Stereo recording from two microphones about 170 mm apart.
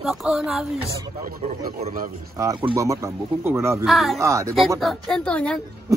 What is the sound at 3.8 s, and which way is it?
Speech, centre (ahead or behind).